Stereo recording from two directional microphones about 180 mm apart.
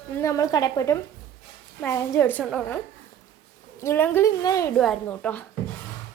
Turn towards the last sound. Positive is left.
turn(degrees=10)  # may be behind; listen again after turning